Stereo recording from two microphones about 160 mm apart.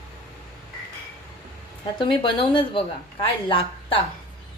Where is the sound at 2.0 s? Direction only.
35° left (ahead or behind).